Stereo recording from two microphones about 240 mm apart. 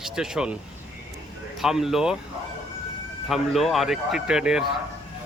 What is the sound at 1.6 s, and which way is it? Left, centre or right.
Speech, centre.